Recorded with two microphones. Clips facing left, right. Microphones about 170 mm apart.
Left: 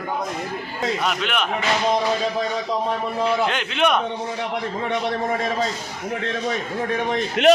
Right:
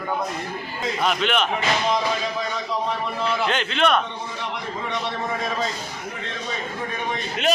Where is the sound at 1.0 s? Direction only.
5° left (ahead or behind).